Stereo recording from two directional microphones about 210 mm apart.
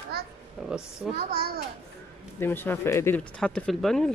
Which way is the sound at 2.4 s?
10° left (ahead or behind).